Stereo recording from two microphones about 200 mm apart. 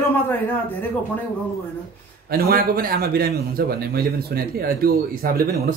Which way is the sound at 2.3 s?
50° right (ahead or behind).